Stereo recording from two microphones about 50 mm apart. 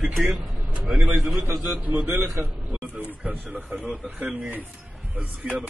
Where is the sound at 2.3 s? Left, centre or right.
Right.